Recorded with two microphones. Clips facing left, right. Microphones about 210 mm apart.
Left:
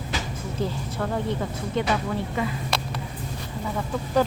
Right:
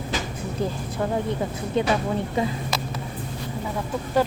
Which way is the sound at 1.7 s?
20° right (ahead or behind).